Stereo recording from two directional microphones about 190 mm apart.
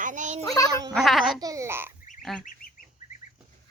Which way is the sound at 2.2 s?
Centre (ahead or behind).